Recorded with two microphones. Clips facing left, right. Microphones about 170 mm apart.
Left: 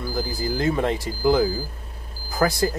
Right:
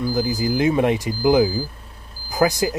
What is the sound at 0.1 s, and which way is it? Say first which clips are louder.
Speech: right 5 dB; 15° right (ahead or behind).